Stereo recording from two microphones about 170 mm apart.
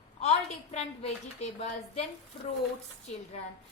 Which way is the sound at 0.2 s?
40° left (ahead or behind).